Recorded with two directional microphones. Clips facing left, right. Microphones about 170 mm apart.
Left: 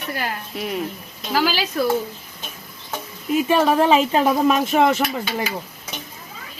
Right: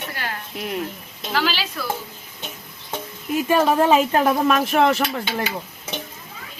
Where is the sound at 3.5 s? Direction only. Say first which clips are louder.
Even; 10° left (ahead or behind).